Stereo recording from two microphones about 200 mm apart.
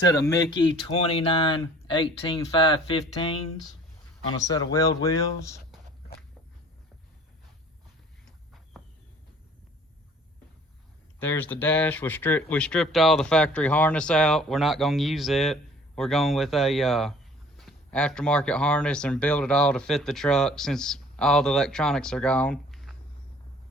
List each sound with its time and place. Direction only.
0.1 s speech: 15° left (ahead or behind)
4.4 s speech: 15° left (ahead or behind)
11.2 s speech: 10° left (ahead or behind)